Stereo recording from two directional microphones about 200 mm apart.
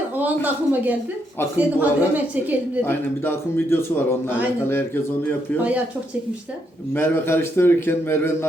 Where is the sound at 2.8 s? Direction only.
10° left (ahead or behind).